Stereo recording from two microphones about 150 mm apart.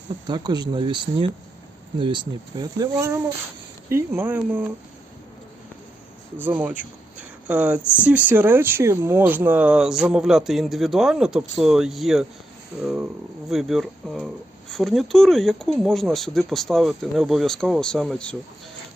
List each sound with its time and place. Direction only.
0.3 s speech: 30° right (ahead or behind); by 4.7 s 10° right (ahead or behind)
6.4 s speech: 10° right (ahead or behind)
7.8 s speech: 15° left (ahead or behind)
8.0 s speech: 10° right (ahead or behind)